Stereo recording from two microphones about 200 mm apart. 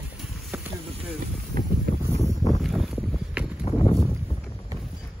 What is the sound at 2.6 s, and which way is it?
Boat, centre (ahead or behind).